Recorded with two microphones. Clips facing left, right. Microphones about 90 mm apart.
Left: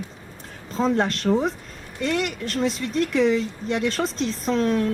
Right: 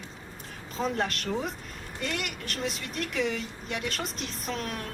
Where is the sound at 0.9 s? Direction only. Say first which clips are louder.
Left 9 dB; 35° left (ahead or behind).